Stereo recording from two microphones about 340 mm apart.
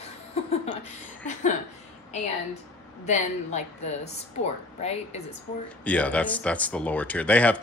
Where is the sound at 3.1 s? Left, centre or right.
Left.